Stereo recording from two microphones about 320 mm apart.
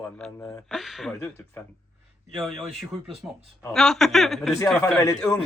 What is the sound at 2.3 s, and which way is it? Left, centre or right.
Speech, centre.